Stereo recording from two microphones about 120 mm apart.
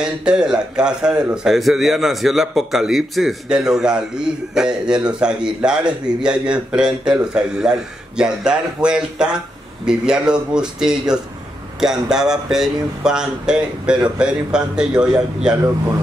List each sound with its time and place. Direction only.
0.0 s a man's voice: 5° right (ahead or behind)